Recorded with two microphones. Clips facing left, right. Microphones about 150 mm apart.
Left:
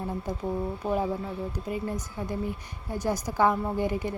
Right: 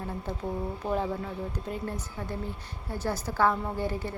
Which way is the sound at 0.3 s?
15° left (ahead or behind).